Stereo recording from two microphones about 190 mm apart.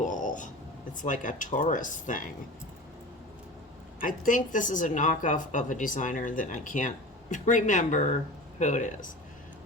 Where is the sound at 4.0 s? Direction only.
45° left (ahead or behind).